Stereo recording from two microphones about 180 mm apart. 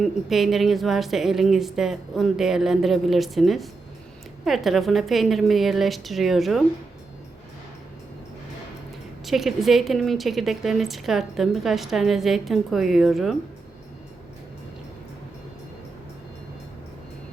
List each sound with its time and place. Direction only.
0.0 s speech: centre (ahead or behind)
9.2 s speech: centre (ahead or behind)